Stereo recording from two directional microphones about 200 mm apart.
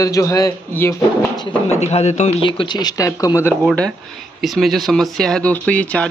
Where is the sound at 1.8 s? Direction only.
35° left (ahead or behind).